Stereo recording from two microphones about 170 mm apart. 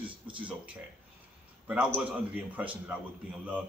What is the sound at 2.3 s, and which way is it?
Speech, 10° right (ahead or behind).